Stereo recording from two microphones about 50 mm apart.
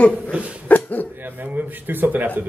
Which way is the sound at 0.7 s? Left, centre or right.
Left.